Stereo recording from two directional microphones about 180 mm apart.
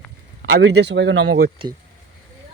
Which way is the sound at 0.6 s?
70° right (ahead or behind).